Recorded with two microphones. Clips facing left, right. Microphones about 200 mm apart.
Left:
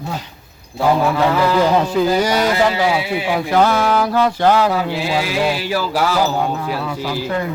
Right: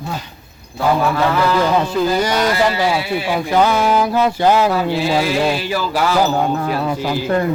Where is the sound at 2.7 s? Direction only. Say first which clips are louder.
Even; 15° left (ahead or behind).